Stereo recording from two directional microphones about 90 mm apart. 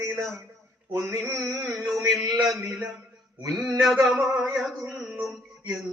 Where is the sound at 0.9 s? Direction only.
30° right (ahead or behind).